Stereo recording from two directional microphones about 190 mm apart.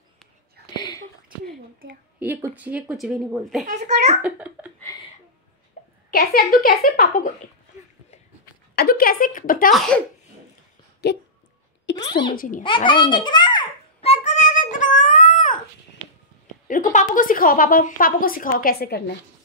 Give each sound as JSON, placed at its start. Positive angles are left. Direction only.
{"t": 0.7, "sound": "whispering", "side_deg": 20}
{"t": 2.1, "sound": "speech", "side_deg": -10}
{"t": 3.6, "sound": "a child's voice", "side_deg": -35}
{"t": 4.2, "sound": "speech", "side_deg": -5}
{"t": 6.0, "sound": "a woman's voice", "side_deg": 50}
{"t": 8.7, "sound": "a woman's voice", "side_deg": 50}
{"t": 9.7, "sound": "speech", "side_deg": 5}
{"t": 11.0, "sound": "speech", "side_deg": 60}
{"t": 12.0, "sound": "speech", "side_deg": 25}
{"t": 12.4, "sound": "a woman's voice", "side_deg": 45}
{"t": 12.6, "sound": "a sound", "side_deg": 25}
{"t": 16.6, "sound": "a woman's voice", "side_deg": 45}